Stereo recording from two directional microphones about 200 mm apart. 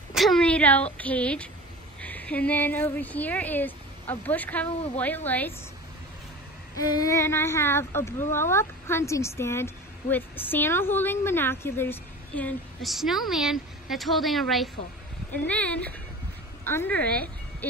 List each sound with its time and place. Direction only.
0.1 s a sound: centre (ahead or behind)
0.9 s a woman's voice: 5° left (ahead or behind)
6.8 s a woman's voice: 20° left (ahead or behind)